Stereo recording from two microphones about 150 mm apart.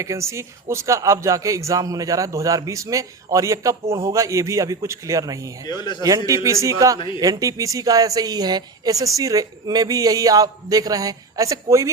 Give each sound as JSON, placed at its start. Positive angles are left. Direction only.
{"t": 0.0, "sound": "speech", "side_deg": -20}
{"t": 5.6, "sound": "a man's voice", "side_deg": 30}
{"t": 6.0, "sound": "speech", "side_deg": -25}